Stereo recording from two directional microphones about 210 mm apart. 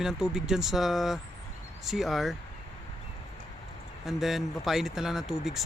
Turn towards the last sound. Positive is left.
turn(degrees=0)  # may be behind; listen again after turning